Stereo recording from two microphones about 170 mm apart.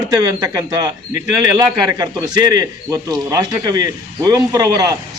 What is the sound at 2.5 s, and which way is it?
Speech, 25° right (ahead or behind).